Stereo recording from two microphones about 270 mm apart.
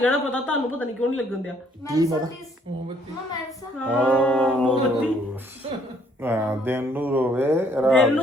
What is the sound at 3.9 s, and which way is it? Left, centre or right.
A man's voice, centre.